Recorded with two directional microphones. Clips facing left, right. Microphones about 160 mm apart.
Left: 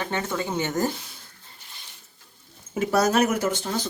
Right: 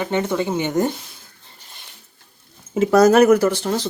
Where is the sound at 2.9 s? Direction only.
90° right.